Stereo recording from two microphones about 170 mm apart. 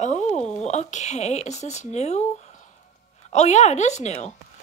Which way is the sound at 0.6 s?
45° left (ahead or behind).